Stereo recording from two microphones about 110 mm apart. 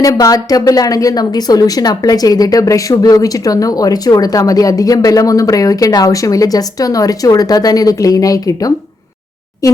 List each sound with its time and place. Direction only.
0.0 s a woman's voice: 30° left (ahead or behind)